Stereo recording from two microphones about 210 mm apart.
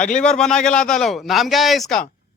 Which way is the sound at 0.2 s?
5° left (ahead or behind).